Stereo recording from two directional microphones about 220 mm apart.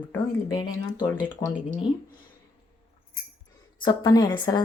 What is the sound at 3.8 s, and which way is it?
Speech, 20° left (ahead or behind).